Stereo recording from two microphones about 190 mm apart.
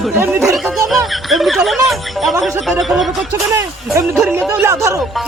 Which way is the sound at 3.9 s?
15° right (ahead or behind).